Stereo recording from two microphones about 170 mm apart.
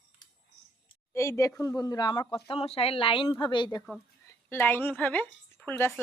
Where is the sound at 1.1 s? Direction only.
15° left (ahead or behind).